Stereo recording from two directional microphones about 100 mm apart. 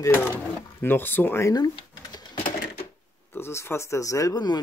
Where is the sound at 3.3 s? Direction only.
25° left (ahead or behind); by 4.6 s 40° left (ahead or behind).